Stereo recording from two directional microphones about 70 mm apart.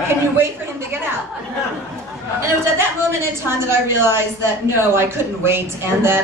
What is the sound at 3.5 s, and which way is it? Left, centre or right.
Speech, right.